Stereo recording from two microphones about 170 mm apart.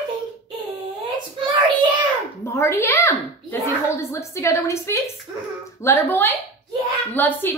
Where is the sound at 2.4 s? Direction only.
15° left (ahead or behind).